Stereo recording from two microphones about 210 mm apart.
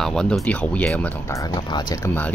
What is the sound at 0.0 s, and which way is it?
Speech, 5° left (ahead or behind).